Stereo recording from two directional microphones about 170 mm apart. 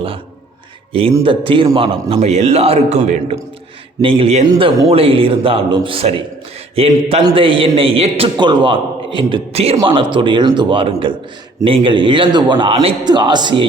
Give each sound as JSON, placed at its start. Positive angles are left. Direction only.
{"t": 1.2, "sound": "a man's voice", "side_deg": -30}